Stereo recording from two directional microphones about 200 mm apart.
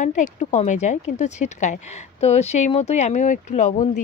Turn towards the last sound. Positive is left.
turn(degrees=35)  # may be behind; listen again after turning